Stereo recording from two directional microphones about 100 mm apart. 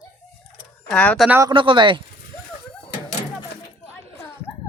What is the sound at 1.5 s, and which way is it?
Speech, 55° right (ahead or behind).